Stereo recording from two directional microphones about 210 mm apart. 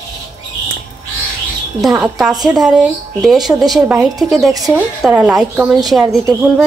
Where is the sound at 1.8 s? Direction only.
Centre (ahead or behind).